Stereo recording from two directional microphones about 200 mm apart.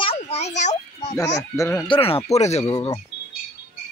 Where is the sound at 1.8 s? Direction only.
25° left (ahead or behind).